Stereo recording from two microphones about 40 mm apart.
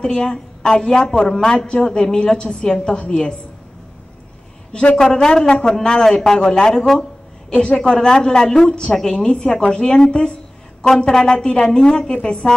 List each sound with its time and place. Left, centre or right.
0.0 s a woman's voice: centre
4.9 s a woman's voice: centre
8.9 s a woman's voice: centre
9.2 s a woman's voice: centre
12.1 s speech: left